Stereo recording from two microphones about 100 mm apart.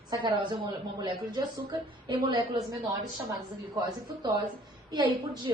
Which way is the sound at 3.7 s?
40° right (ahead or behind).